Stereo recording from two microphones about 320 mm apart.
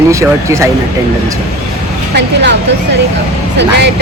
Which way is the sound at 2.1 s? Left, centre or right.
Right.